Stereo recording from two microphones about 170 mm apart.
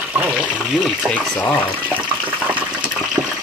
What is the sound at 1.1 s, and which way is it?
Speech, 10° left (ahead or behind).